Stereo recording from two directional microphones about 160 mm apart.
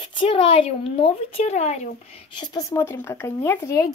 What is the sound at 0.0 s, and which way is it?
Speech, 30° left (ahead or behind).